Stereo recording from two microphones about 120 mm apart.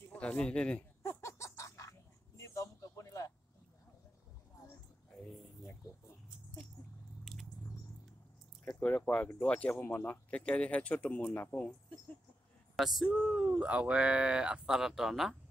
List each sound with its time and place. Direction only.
0.1 s a man's voice: 10° left (ahead or behind)
1.0 s a sound: 25° left (ahead or behind)
7.3 s squish: 5° left (ahead or behind)
8.6 s speech: 15° left (ahead or behind)
12.7 s speech: centre (ahead or behind)